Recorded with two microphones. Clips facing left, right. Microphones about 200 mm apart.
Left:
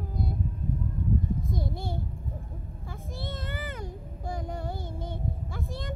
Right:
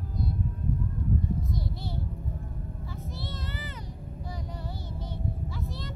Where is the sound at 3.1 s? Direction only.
50° left (ahead or behind).